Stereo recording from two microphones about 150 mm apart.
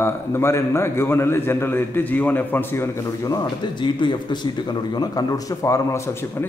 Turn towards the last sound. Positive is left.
turn(degrees=20)  # may be behind; listen again after turning